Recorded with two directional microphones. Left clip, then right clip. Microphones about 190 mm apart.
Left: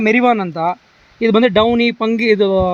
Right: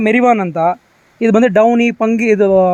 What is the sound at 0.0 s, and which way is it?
Speech, 35° right (ahead or behind).